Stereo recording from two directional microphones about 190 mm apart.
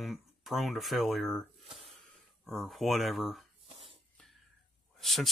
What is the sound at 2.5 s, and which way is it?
Speech, centre (ahead or behind).